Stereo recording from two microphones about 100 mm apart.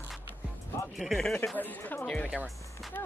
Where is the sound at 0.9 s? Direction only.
Centre (ahead or behind).